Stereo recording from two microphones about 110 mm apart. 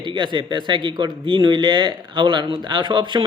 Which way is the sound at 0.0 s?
45° right (ahead or behind).